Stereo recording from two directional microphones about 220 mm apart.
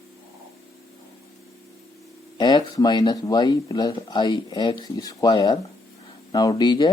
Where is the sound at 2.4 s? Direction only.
20° left (ahead or behind).